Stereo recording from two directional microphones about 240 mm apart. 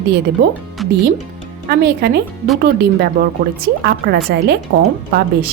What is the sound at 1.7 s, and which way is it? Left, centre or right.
A woman's voice, right.